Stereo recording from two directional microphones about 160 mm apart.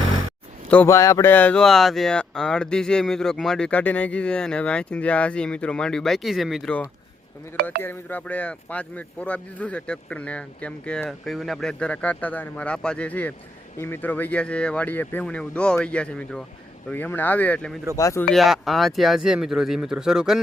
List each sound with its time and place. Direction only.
0.7 s speech: 15° left (ahead or behind)
17.9 s speech: 20° left (ahead or behind)
18.3 s speech: centre (ahead or behind)